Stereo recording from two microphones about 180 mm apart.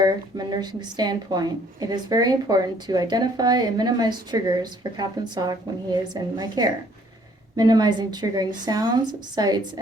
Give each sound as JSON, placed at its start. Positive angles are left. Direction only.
{"t": 0.0, "sound": "a woman's voice", "side_deg": -20}